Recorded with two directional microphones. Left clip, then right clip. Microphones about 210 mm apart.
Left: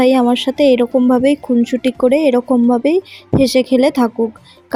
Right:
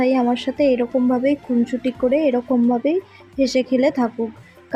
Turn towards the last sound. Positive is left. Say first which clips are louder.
# left 5 dB
turn(degrees=35)  # may be behind; listen again after turning